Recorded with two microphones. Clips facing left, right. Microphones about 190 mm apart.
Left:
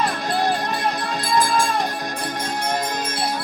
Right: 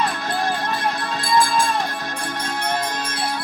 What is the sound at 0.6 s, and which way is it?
Music, 15° left (ahead or behind).